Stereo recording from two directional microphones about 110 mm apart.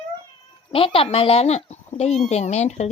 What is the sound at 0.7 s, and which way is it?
Speech, 60° left (ahead or behind).